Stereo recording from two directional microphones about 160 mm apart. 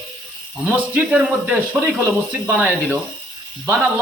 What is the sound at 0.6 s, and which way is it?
A man's voice, 10° right (ahead or behind).